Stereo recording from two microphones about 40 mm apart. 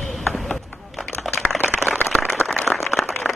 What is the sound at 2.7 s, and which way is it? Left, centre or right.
Applause, centre.